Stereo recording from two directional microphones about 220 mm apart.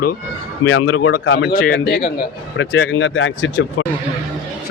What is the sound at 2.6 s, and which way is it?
Speech, 60° left (ahead or behind).